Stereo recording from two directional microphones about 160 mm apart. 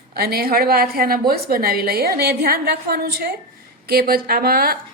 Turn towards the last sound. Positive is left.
turn(degrees=-70)  # may be behind; listen again after turning